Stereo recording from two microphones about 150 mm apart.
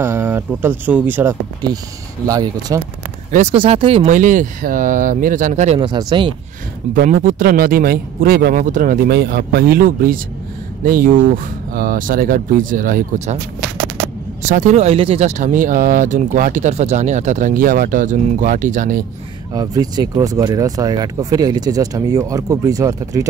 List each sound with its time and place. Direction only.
0.0 s speech: 15° right (ahead or behind)
2.2 s speech: 25° right (ahead or behind)
3.3 s speech: 50° right (ahead or behind)
3.5 s speech: 40° right (ahead or behind)
4.1 s speech: 60° right (ahead or behind)
5.8 s speech: 30° right (ahead or behind)
6.9 s speech: 65° right (ahead or behind)
14.4 s speech: 50° right (ahead or behind)
19.5 s speech: 25° right (ahead or behind)